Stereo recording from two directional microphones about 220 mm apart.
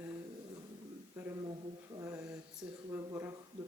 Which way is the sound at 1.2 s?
10° right (ahead or behind).